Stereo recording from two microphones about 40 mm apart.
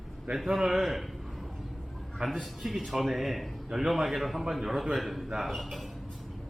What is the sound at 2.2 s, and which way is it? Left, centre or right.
Speech, right.